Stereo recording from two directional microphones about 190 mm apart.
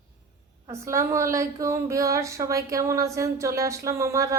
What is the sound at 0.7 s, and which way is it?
Speech, 15° right (ahead or behind).